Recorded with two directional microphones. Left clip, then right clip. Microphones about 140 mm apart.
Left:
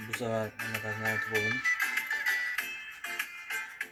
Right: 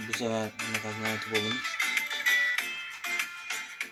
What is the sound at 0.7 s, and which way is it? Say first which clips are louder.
Music: left 2 dB; 20° right (ahead or behind).